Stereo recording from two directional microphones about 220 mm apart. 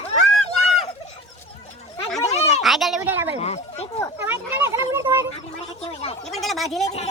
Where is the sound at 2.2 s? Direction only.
30° left (ahead or behind).